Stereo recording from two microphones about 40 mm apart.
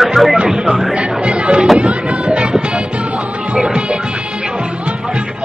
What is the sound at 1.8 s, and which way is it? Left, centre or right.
Speech, right.